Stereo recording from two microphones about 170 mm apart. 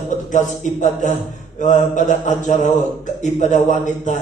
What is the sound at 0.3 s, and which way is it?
A man's voice, 45° left (ahead or behind).